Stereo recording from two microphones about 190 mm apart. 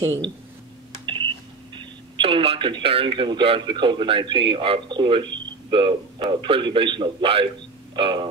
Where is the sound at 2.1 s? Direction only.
30° right (ahead or behind).